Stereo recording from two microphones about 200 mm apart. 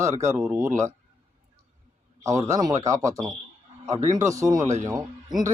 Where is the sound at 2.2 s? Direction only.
15° right (ahead or behind).